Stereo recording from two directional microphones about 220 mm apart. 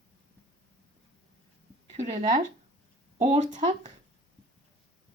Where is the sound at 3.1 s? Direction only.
30° right (ahead or behind).